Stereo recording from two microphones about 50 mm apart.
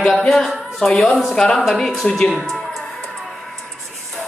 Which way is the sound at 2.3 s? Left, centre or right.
Centre.